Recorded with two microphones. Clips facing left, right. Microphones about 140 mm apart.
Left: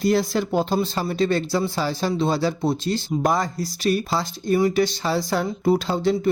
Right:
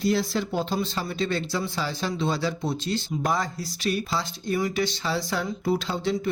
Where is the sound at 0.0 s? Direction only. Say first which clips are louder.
Left 4 dB; 50° left (ahead or behind).